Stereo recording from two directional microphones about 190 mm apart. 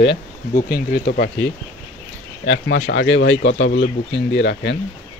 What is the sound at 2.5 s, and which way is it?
Speech, 75° left (ahead or behind).